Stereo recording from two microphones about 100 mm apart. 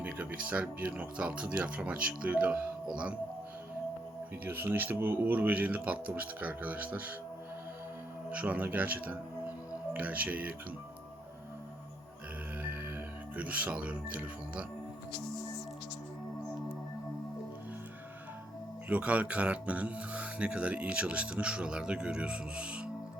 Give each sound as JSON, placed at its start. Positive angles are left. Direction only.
{"t": 0.0, "sound": "speech", "side_deg": -15}
{"t": 4.4, "sound": "speech", "side_deg": -20}
{"t": 8.3, "sound": "speech", "side_deg": -15}
{"t": 13.3, "sound": "speech", "side_deg": -15}
{"t": 18.9, "sound": "speech", "side_deg": -15}